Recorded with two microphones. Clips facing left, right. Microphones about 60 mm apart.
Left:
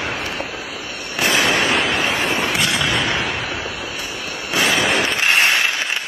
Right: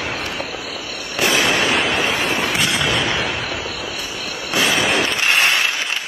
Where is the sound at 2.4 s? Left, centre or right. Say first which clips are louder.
Even; centre.